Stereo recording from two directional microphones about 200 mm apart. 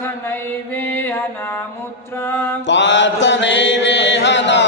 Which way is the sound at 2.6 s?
60° left (ahead or behind).